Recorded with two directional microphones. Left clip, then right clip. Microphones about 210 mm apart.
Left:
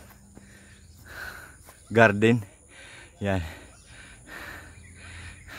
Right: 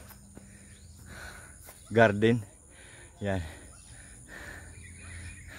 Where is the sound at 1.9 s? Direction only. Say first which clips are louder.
Left 4 dB; 30° left (ahead or behind).